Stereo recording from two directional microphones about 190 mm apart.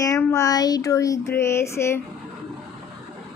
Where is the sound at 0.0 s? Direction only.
15° left (ahead or behind).